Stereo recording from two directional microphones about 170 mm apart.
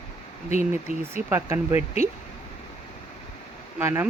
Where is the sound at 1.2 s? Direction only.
15° right (ahead or behind).